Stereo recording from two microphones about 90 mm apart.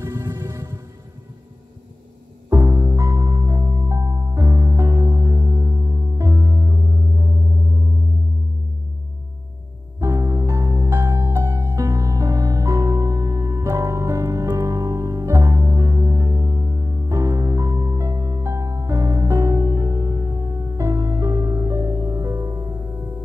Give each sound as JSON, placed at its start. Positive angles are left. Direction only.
{"t": 0.0, "sound": "music", "side_deg": -35}
{"t": 2.5, "sound": "music", "side_deg": -35}
{"t": 9.9, "sound": "music", "side_deg": -35}
{"t": 22.8, "sound": "music", "side_deg": -25}